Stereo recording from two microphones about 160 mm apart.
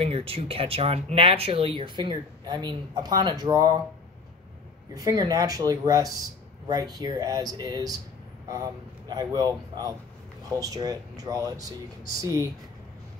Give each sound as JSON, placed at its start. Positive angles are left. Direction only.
{"t": 0.0, "sound": "speech", "side_deg": -35}
{"t": 4.9, "sound": "speech", "side_deg": -25}
{"t": 9.1, "sound": "speech", "side_deg": -25}